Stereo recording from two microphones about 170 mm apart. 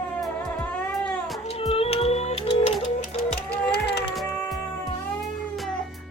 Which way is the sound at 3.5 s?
75° left (ahead or behind).